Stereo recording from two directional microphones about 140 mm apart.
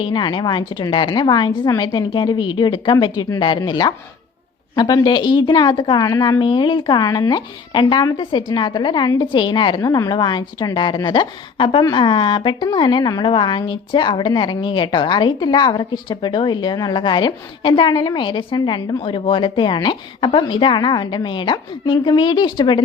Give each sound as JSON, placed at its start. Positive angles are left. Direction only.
{"t": 0.0, "sound": "speech", "side_deg": 35}